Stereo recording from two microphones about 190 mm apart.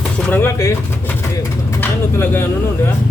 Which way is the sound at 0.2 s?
10° left (ahead or behind).